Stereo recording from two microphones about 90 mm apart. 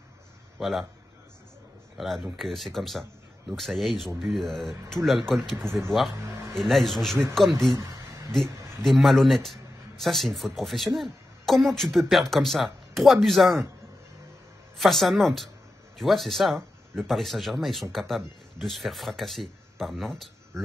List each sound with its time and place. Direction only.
0.6 s a man's voice: centre (ahead or behind)
2.0 s speech: centre (ahead or behind)
7.7 s speech: 40° right (ahead or behind)
8.8 s speech: centre (ahead or behind)
14.8 s speech: centre (ahead or behind)